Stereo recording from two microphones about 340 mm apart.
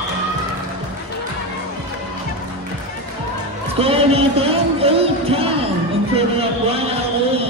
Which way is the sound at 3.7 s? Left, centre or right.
Centre.